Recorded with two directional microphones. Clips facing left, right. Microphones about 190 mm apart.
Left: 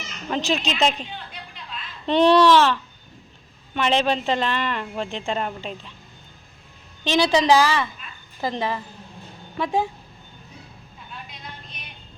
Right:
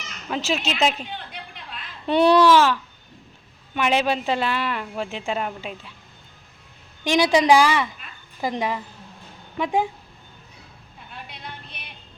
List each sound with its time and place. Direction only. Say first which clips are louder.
0.3 s speech: left 1 dB; 5° right (ahead or behind)
2.0 s speech: even; 10° right (ahead or behind)
7.0 s speech: right 1 dB; 15° right (ahead or behind)
11.3 s a sound: right 2 dB; 65° right (ahead or behind)